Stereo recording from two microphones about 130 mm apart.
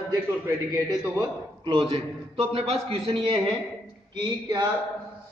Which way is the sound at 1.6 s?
40° right (ahead or behind).